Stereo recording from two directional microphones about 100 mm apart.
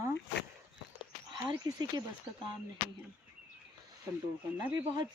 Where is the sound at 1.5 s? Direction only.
40° right (ahead or behind).